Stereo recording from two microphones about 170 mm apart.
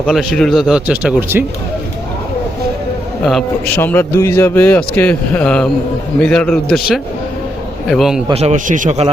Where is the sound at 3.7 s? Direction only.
15° left (ahead or behind).